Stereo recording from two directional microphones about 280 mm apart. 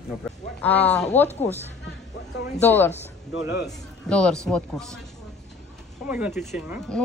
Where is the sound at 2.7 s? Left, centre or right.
Centre.